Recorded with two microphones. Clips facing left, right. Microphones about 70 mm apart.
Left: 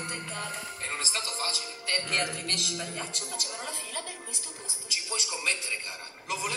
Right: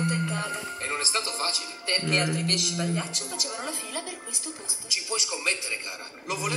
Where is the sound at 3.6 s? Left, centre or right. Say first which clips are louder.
Right 3 dB; centre.